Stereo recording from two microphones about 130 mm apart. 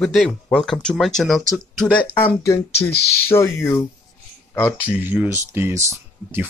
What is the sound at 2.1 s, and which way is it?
Speech, 20° left (ahead or behind).